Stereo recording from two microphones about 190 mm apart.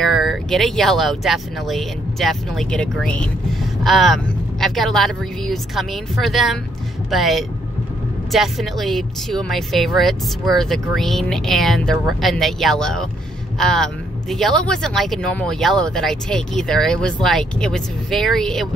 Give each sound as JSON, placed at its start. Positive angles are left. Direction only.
{"t": 0.0, "sound": "a woman's voice", "side_deg": 0}